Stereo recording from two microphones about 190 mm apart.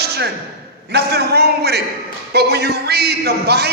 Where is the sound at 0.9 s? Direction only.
60° right (ahead or behind).